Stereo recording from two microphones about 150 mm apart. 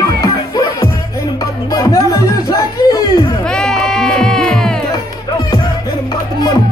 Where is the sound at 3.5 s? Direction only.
5° left (ahead or behind).